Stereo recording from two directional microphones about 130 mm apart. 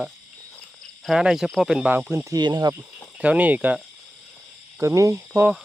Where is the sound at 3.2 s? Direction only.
10° right (ahead or behind).